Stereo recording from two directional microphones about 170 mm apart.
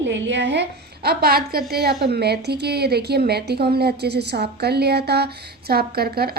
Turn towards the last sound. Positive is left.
turn(degrees=-65)  # may be behind; listen again after turning